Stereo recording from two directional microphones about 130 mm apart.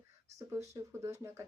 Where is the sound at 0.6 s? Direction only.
25° right (ahead or behind).